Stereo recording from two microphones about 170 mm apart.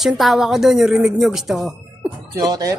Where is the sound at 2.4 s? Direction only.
20° right (ahead or behind).